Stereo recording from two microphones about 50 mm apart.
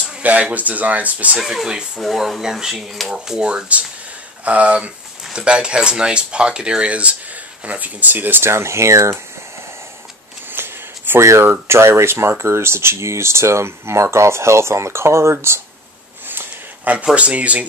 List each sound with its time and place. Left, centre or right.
0.2 s speech: right
1.4 s speech: centre; by 8.5 s right
8.5 s speech: right
10.5 s a sound: right
11.1 s speech: right
11.6 s speech: right
17.1 s speech: right